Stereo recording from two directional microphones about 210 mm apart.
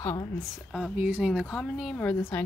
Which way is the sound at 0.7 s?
5° right (ahead or behind).